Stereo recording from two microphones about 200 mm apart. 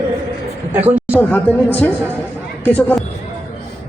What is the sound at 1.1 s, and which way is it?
Speech, 5° left (ahead or behind).